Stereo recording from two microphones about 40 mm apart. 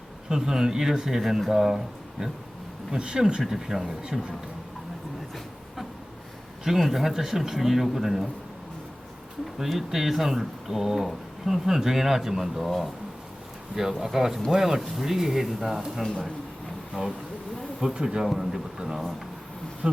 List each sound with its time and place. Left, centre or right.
0.3 s speech: centre
3.4 s speech: centre
6.7 s speech: centre
9.6 s speech: centre
12.6 s speech: centre
14.0 s speech: centre
14.8 s speech: centre
17.0 s speech: right
17.9 s speech: centre
19.8 s bee: right